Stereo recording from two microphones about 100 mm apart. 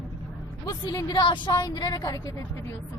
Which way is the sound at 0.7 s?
40° left (ahead or behind).